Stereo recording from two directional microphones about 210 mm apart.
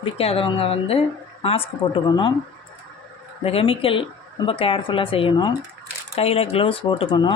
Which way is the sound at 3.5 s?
25° left (ahead or behind).